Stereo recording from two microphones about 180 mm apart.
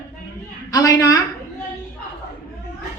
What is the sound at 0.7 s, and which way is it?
Speech, 20° left (ahead or behind).